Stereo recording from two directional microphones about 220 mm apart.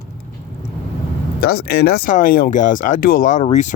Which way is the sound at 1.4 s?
45° left (ahead or behind).